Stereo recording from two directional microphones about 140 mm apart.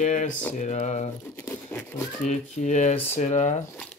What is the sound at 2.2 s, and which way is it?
Speech, 55° left (ahead or behind).